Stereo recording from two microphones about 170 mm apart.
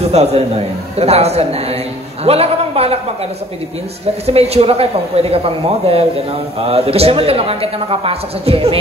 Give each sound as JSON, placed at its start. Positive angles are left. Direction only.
{"t": 0.1, "sound": "speech", "side_deg": -40}
{"t": 4.3, "sound": "speech", "side_deg": -35}